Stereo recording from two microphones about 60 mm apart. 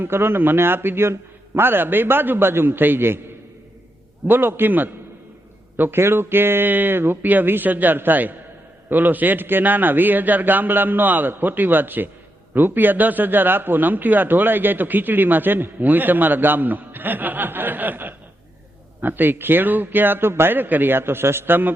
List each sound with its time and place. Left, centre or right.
0.0 s a man's voice: right
4.3 s a man's voice: right